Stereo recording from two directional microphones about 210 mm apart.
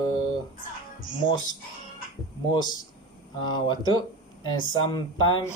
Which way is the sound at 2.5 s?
20° left (ahead or behind).